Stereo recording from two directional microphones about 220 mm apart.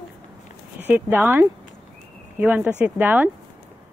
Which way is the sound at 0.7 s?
10° right (ahead or behind).